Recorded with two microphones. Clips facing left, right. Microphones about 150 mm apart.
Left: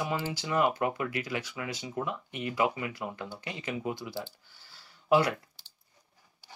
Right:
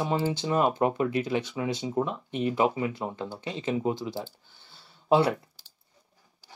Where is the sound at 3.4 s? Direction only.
15° left (ahead or behind).